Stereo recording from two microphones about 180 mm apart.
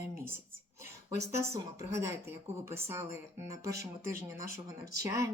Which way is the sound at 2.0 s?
15° right (ahead or behind).